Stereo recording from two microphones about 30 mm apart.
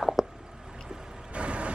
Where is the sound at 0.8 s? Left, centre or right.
Right.